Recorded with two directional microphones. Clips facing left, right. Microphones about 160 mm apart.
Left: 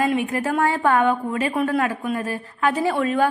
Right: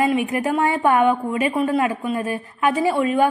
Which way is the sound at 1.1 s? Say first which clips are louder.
Right 2 dB; 5° right (ahead or behind).